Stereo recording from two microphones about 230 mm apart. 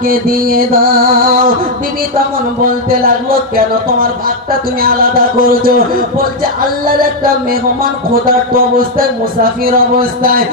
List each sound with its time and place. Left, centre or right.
0.0 s speech: right
2.9 s speech: right
5.4 s speech: right
7.8 s speech: right